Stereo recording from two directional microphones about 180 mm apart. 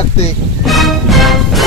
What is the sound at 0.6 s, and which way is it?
Music, centre (ahead or behind).